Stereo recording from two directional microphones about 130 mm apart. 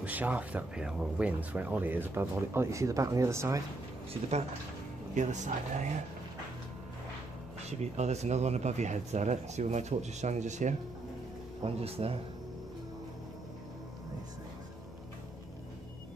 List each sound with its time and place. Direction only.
0.0 s speech: 10° right (ahead or behind)
4.1 s speech: 55° right (ahead or behind)
5.1 s speech: 65° right (ahead or behind)
7.8 s speech: 60° right (ahead or behind)
11.6 s speech: 50° right (ahead or behind)